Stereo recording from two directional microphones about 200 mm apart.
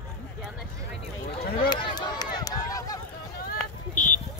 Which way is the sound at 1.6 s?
20° left (ahead or behind).